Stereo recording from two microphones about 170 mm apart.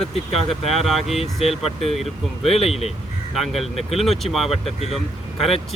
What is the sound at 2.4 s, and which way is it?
Speech, 35° left (ahead or behind).